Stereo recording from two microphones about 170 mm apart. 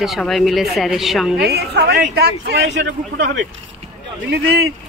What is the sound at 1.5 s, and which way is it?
Speech, 75° right (ahead or behind).